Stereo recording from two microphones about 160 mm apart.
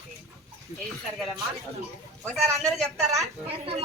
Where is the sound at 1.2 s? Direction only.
Centre (ahead or behind).